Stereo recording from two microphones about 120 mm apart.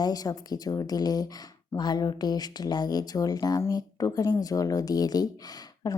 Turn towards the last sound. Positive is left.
turn(degrees=30)  # may be behind; listen again after turning